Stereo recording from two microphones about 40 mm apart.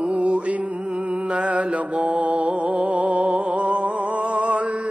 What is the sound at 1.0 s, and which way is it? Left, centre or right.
Mantra, right.